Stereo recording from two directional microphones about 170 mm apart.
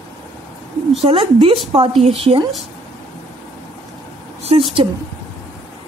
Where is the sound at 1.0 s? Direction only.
35° right (ahead or behind).